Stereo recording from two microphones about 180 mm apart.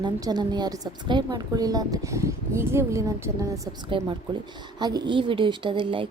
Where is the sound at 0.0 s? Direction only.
25° right (ahead or behind).